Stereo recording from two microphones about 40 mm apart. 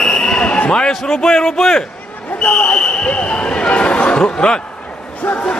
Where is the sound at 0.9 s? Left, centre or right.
Centre.